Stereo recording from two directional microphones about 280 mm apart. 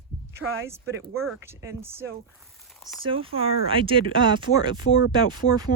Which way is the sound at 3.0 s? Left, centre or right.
Centre.